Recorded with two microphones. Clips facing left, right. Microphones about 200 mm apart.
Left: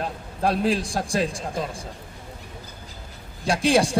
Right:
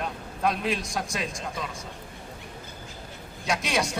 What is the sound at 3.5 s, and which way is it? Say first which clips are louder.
Speech: left 8 dB; 30° left (ahead or behind).